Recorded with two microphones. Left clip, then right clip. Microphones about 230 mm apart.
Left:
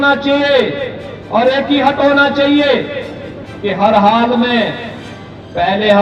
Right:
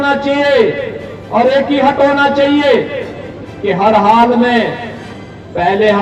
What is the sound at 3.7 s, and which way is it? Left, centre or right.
Speech, centre.